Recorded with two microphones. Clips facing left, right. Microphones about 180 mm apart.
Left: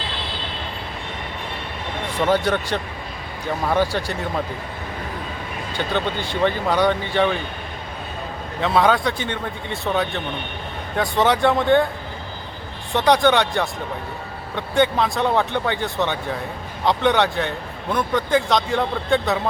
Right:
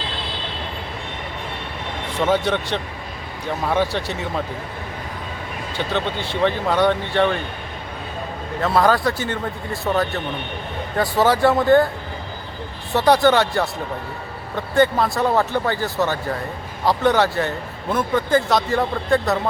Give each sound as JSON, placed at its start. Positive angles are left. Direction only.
{"t": 2.2, "sound": "speech", "side_deg": 0}
{"t": 5.7, "sound": "speech", "side_deg": 0}
{"t": 8.6, "sound": "speech", "side_deg": 0}
{"t": 12.9, "sound": "speech", "side_deg": -5}